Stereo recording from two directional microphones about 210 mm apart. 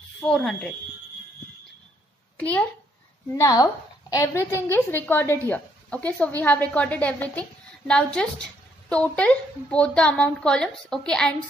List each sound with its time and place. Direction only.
0.2 s speech: 5° left (ahead or behind)
2.3 s a child's voice: 5° left (ahead or behind)